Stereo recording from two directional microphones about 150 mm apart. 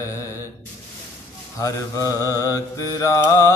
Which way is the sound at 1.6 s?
25° left (ahead or behind).